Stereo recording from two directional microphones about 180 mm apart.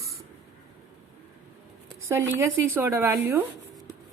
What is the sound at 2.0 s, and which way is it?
Speech, 15° right (ahead or behind).